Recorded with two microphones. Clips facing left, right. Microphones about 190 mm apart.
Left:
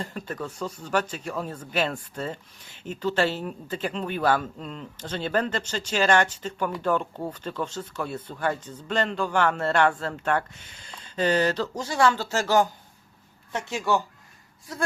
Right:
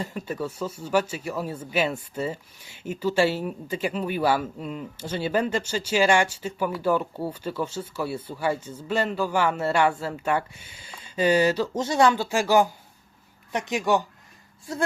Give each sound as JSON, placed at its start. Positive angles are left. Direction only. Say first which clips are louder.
{"t": 0.0, "sound": "speech", "louder": "right 3 dB", "side_deg": -10}
{"t": 11.7, "sound": "speech", "louder": "right 2 dB", "side_deg": -20}